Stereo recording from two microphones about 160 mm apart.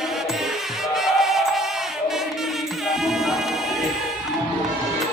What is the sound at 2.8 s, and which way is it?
Music, 5° right (ahead or behind).